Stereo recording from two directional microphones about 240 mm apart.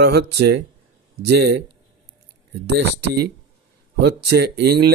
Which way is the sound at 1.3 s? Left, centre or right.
Right.